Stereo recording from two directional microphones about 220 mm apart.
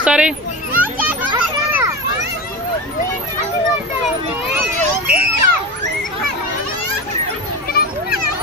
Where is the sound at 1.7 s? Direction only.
15° right (ahead or behind).